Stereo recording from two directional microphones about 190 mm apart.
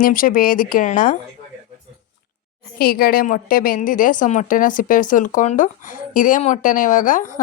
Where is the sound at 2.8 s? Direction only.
50° left (ahead or behind).